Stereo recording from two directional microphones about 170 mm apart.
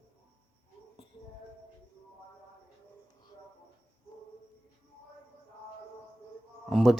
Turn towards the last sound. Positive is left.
turn(degrees=0)  # may be behind; listen again after turning